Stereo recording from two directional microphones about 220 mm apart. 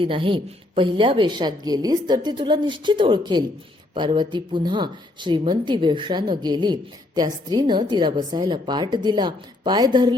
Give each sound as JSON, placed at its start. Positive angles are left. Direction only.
{"t": 0.0, "sound": "a woman's voice", "side_deg": -25}